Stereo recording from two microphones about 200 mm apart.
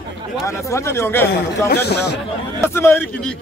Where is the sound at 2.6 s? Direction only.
10° left (ahead or behind).